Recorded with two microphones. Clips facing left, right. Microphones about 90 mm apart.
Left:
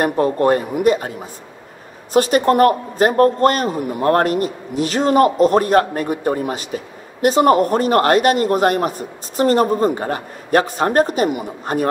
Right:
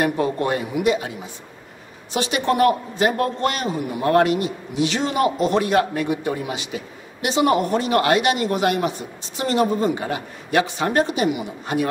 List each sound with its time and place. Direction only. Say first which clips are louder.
0.0 s a man's voice: left 5 dB; 40° left (ahead or behind)